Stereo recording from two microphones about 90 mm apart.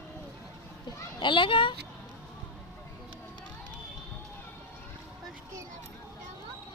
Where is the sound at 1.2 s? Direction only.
65° left (ahead or behind).